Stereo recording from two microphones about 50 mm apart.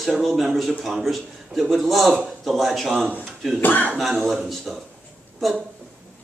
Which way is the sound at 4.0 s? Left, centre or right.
Centre.